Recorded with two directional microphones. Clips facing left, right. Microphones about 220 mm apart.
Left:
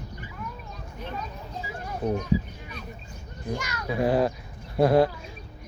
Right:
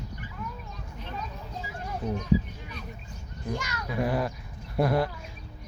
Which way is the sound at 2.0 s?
60° left (ahead or behind).